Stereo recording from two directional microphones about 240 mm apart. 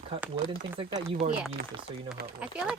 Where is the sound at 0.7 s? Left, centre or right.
Right.